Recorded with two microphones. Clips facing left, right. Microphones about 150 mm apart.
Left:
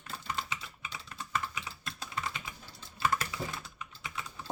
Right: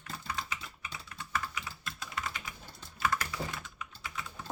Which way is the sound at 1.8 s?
25° left (ahead or behind).